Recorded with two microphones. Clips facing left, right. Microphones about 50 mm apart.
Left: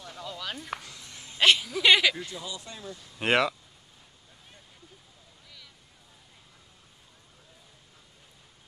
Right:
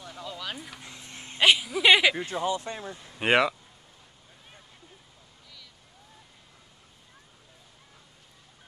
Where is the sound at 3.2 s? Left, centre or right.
Centre.